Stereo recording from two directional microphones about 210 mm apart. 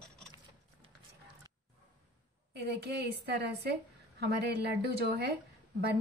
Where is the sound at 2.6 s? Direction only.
50° right (ahead or behind).